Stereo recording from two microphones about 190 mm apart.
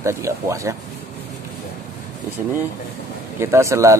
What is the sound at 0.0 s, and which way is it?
Speech, 15° right (ahead or behind).